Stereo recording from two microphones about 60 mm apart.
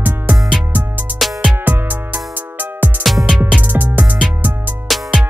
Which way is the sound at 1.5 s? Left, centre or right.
Right.